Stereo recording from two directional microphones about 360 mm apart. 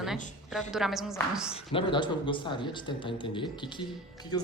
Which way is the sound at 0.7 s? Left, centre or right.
Centre.